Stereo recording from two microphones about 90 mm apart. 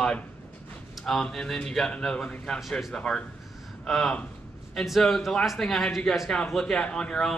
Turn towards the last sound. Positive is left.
turn(degrees=10)  # may be behind; listen again after turning